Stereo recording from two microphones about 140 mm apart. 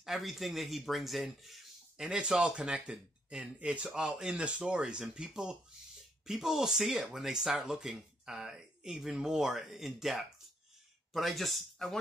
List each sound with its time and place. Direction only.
0.0 s speech: centre (ahead or behind)